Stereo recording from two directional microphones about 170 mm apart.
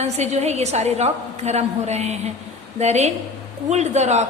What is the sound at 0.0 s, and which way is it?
A woman's voice, 40° right (ahead or behind).